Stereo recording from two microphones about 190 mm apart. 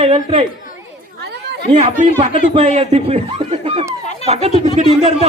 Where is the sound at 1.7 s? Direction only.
30° right (ahead or behind).